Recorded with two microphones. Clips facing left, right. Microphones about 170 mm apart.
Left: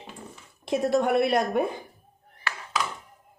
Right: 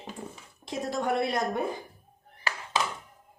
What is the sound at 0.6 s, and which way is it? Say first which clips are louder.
Speech: left 6 dB; 65° left (ahead or behind).